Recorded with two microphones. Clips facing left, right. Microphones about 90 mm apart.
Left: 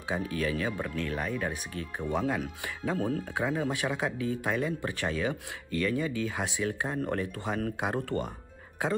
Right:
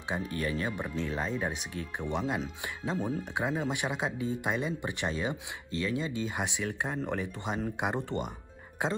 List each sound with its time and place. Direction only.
0.2 s speech: 90° left
0.7 s speech: 20° right (ahead or behind)